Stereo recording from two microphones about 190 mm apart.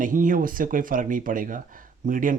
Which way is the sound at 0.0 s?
45° right (ahead or behind).